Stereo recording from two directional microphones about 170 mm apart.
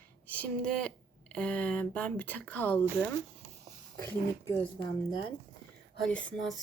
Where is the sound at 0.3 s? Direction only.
10° left (ahead or behind).